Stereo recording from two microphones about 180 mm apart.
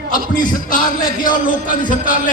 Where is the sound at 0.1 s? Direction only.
50° left (ahead or behind).